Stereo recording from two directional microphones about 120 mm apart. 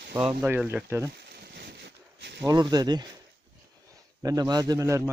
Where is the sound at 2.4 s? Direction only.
35° right (ahead or behind).